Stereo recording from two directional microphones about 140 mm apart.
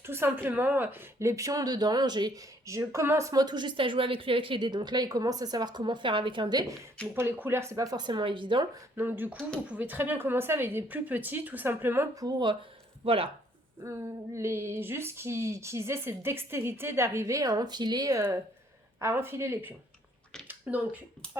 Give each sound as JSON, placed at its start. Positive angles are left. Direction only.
{"t": 0.0, "sound": "a woman's voice", "side_deg": -15}
{"t": 7.1, "sound": "a woman's voice", "side_deg": -15}
{"t": 9.0, "sound": "a woman's voice", "side_deg": -15}
{"t": 12.2, "sound": "speech", "side_deg": -30}
{"t": 13.1, "sound": "speech", "side_deg": -40}
{"t": 14.3, "sound": "a woman's voice", "side_deg": -20}